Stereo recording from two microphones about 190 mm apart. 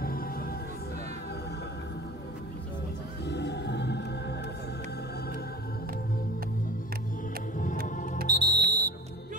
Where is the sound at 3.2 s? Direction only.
60° left (ahead or behind).